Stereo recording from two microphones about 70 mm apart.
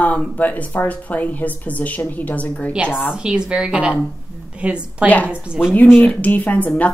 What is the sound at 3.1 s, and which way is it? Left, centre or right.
A woman's voice, centre.